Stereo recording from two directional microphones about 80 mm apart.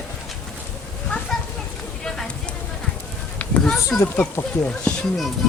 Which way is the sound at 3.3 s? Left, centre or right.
Centre.